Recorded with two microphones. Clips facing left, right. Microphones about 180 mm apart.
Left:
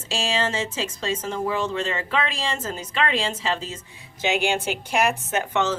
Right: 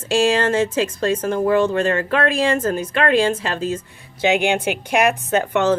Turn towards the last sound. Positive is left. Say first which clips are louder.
# right 6 dB
turn(degrees=-55)  # may be behind; listen again after turning